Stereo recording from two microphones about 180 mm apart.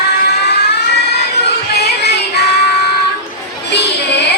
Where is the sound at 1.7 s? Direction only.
65° left (ahead or behind).